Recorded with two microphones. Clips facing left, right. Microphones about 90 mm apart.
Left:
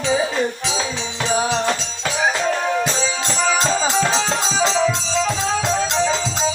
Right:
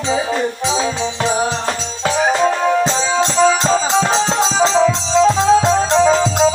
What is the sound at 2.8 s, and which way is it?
Music, 25° right (ahead or behind).